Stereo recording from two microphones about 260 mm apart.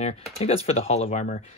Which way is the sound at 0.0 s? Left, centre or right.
Left.